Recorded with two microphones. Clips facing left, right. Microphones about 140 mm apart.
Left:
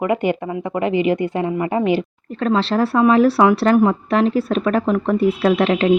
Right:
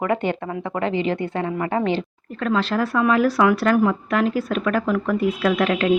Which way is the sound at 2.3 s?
30° left (ahead or behind).